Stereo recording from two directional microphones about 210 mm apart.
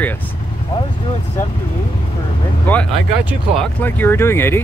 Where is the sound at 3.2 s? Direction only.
Centre (ahead or behind).